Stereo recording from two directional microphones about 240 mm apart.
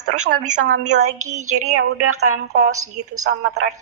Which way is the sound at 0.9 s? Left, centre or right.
Right.